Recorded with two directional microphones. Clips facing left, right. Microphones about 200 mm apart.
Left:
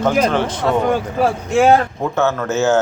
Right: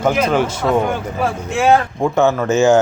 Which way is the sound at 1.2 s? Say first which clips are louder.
Left 3 dB; 45° left (ahead or behind).